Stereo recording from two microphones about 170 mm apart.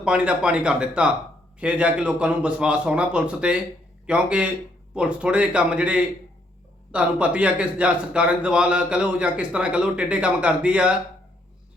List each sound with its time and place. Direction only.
0.0 s a man's voice: 5° right (ahead or behind)